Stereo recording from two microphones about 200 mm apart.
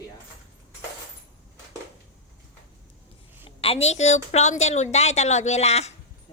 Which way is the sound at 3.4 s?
30° left (ahead or behind).